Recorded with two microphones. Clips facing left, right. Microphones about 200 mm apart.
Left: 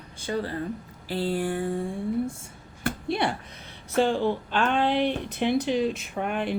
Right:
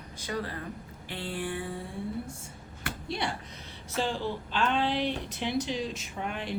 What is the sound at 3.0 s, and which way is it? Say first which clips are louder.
A woman's voice: left 6 dB; 60° left (ahead or behind).